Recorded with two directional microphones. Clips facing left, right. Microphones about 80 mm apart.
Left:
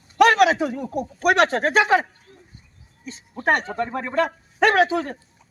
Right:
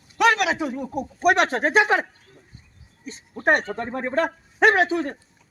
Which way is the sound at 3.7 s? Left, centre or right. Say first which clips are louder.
Left 3 dB; left.